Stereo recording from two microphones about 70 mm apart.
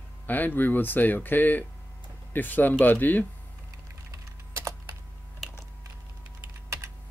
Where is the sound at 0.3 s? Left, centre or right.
Left.